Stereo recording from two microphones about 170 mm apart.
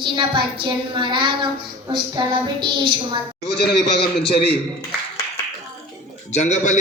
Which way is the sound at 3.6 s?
70° left (ahead or behind).